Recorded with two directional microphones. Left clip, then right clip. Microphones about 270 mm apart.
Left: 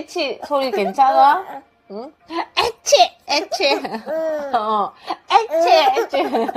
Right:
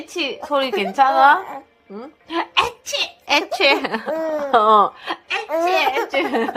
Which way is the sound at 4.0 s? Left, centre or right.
Right.